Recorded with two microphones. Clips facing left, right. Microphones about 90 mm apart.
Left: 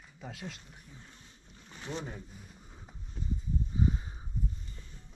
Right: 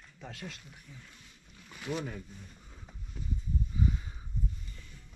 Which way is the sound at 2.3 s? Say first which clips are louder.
Right 1 dB; 5° left (ahead or behind).